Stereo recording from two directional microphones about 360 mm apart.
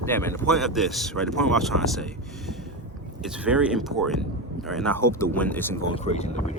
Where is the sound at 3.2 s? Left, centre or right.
Centre.